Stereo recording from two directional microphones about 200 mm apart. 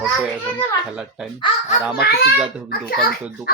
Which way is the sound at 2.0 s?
50° left (ahead or behind).